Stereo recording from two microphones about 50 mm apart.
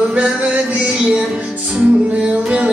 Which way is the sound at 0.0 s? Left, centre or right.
Right.